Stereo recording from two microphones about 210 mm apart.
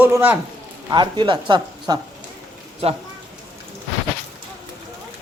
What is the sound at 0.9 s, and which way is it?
Speech, 20° right (ahead or behind).